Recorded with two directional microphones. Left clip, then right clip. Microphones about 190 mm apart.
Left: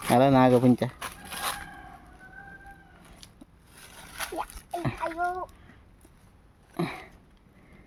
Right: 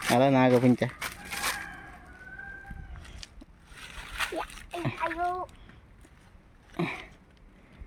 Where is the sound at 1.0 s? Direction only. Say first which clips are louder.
Right 1 dB; 45° right (ahead or behind).